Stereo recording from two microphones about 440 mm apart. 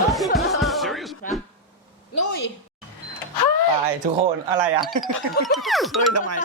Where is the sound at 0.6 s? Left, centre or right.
Centre.